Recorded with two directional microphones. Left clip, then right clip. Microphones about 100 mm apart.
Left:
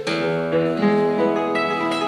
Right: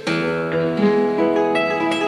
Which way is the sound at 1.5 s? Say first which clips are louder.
Right 2 dB; 20° right (ahead or behind).